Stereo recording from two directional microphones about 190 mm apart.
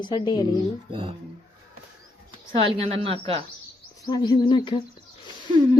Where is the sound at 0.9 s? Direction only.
25° right (ahead or behind).